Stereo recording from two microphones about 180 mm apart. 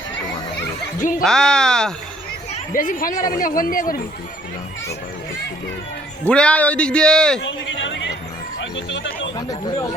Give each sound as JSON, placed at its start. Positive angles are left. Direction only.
{"t": 0.9, "sound": "speech", "side_deg": 45}
{"t": 1.2, "sound": "speech", "side_deg": 5}
{"t": 2.5, "sound": "speech", "side_deg": 50}
{"t": 6.2, "sound": "speech", "side_deg": 5}
{"t": 7.4, "sound": "a man's voice", "side_deg": 90}
{"t": 9.5, "sound": "speech", "side_deg": 15}